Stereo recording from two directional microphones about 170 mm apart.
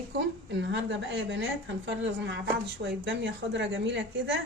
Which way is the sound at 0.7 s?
90° right.